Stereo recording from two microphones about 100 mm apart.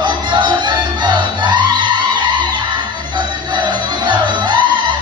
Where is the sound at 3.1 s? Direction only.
50° right (ahead or behind).